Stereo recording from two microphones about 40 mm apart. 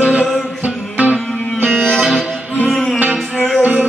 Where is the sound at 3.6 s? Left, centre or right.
Right.